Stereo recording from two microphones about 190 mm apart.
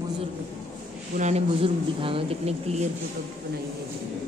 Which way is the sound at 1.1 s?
35° right (ahead or behind).